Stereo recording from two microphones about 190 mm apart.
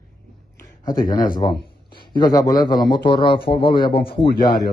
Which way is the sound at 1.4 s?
25° left (ahead or behind).